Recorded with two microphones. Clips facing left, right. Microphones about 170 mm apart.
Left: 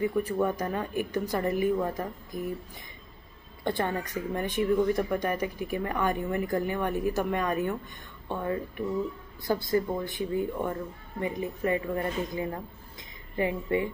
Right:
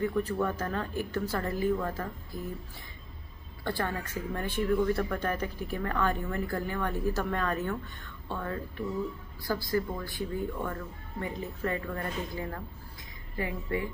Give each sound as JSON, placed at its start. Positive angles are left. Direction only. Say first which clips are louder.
{"t": 0.0, "sound": "speech", "louder": "left 2 dB", "side_deg": 10}
{"t": 3.6, "sound": "speech", "louder": "left 4 dB", "side_deg": 20}